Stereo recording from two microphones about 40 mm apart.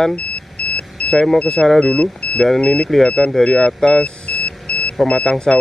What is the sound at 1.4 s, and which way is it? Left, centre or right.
Speech, left.